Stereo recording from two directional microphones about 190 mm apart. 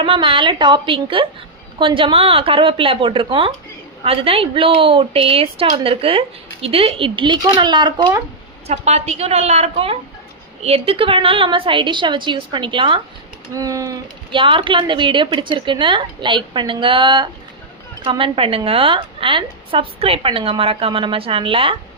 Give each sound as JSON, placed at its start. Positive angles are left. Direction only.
{"t": 0.0, "sound": "a woman's voice", "side_deg": -25}
{"t": 8.6, "sound": "a woman's voice", "side_deg": -35}